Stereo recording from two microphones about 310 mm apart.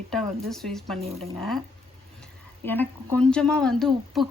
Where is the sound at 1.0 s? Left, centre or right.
Centre.